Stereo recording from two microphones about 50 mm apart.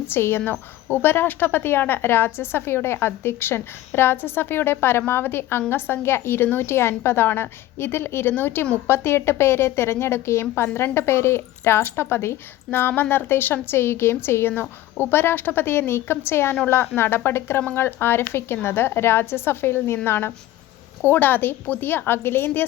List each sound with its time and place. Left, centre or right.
0.1 s speech: left
8.9 s a woman's voice: left
21.0 s speech: left